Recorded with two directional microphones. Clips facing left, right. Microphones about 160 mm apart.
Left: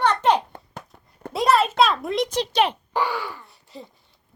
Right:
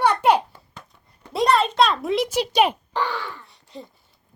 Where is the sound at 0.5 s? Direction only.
50° left (ahead or behind).